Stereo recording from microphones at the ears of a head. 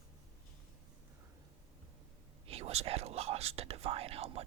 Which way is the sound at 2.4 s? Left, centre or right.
Right.